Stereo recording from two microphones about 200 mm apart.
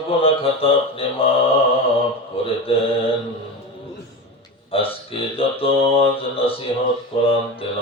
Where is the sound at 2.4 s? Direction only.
30° left (ahead or behind).